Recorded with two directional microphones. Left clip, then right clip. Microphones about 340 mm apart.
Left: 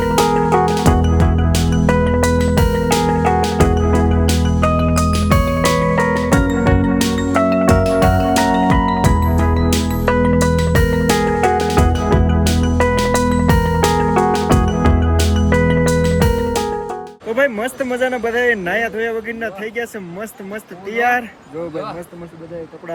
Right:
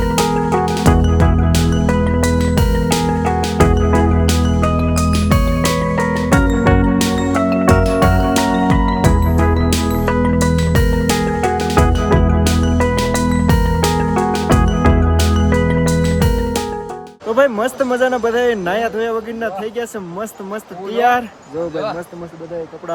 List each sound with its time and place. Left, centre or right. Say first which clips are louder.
0.0 s music: left 2 dB; centre
0.6 s music: left 2 dB; right
0.9 s music: right 1 dB; centre
17.3 s a sound: right 3 dB; right